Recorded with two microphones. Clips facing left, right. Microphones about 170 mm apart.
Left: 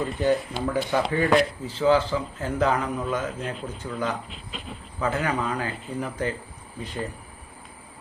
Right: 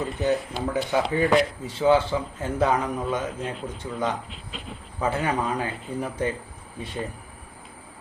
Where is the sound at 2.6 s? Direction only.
20° right (ahead or behind).